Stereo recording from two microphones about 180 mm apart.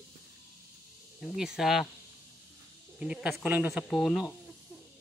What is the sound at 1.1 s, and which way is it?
Speech, centre (ahead or behind).